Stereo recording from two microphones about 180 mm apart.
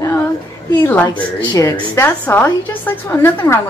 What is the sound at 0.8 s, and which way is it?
Speech, 10° left (ahead or behind).